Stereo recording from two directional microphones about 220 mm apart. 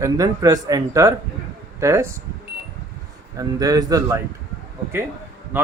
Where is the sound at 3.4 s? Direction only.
15° right (ahead or behind).